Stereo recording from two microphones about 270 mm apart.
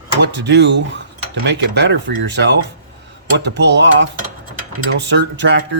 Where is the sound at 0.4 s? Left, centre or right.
Right.